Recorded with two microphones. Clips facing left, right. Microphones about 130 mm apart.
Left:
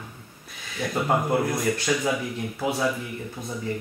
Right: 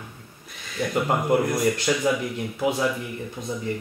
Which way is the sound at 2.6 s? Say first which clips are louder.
Right 3 dB; 15° right (ahead or behind).